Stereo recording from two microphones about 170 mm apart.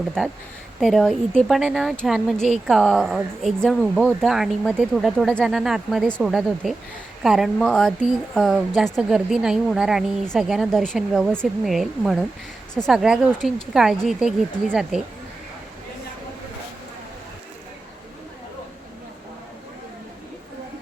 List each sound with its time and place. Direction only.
0.8 s speech: centre (ahead or behind)